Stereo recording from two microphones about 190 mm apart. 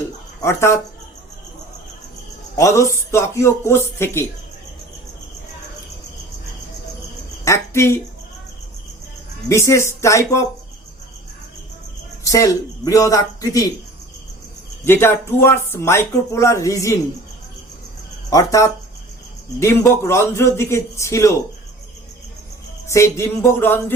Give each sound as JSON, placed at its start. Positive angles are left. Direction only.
{"t": 0.4, "sound": "speech", "side_deg": 15}
{"t": 2.6, "sound": "speech", "side_deg": 15}
{"t": 7.4, "sound": "speech", "side_deg": 15}
{"t": 9.5, "sound": "speech", "side_deg": 15}
{"t": 12.2, "sound": "speech", "side_deg": 15}
{"t": 14.8, "sound": "speech", "side_deg": 10}
{"t": 18.3, "sound": "speech", "side_deg": 15}
{"t": 22.9, "sound": "speech", "side_deg": 15}